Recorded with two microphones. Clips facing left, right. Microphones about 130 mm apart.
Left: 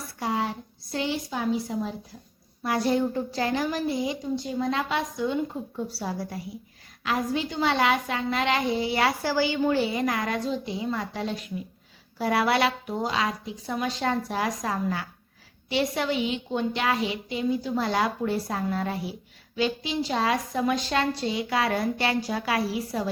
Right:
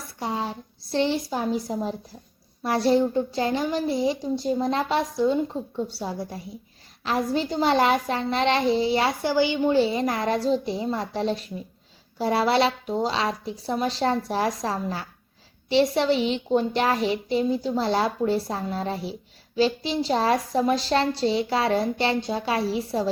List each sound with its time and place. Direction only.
0.2 s a woman's voice: 25° right (ahead or behind)
5.7 s a woman's voice: 25° right (ahead or behind)
7.0 s a woman's voice: 35° right (ahead or behind)